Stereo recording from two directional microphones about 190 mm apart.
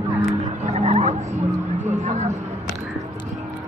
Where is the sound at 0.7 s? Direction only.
30° right (ahead or behind).